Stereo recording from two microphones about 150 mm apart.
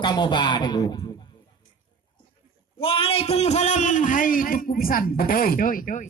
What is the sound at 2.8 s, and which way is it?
A man's voice, 35° left (ahead or behind).